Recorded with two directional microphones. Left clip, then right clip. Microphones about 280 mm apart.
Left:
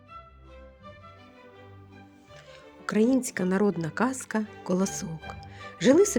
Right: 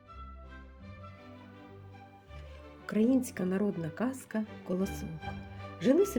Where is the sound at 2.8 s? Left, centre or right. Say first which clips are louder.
Left 5 dB; left.